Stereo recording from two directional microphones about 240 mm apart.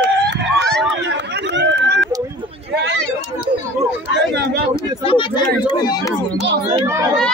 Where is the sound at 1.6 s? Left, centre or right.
Right.